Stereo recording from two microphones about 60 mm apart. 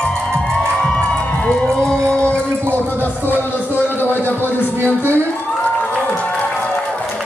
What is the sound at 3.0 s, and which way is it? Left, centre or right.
Music, right.